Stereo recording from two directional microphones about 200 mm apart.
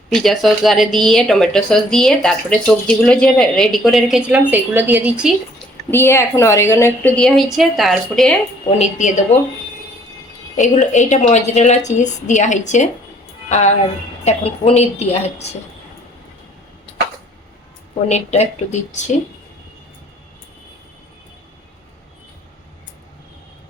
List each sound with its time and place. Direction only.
0.1 s speech: centre (ahead or behind)
5.9 s a woman's voice: 10° left (ahead or behind)
8.8 s a woman's voice: 35° left (ahead or behind)
10.6 s a woman's voice: 35° left (ahead or behind)
18.1 s a woman's voice: 35° left (ahead or behind)